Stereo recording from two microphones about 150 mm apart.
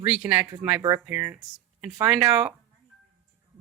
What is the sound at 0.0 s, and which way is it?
Speech, 5° right (ahead or behind).